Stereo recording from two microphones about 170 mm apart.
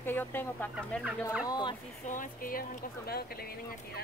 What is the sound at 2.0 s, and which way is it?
Speech, 50° left (ahead or behind).